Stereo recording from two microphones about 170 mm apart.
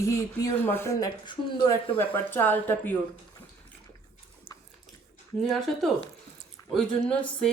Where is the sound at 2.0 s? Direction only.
10° left (ahead or behind).